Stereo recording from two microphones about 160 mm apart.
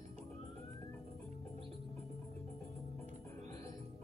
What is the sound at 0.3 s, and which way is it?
Police car, 15° left (ahead or behind).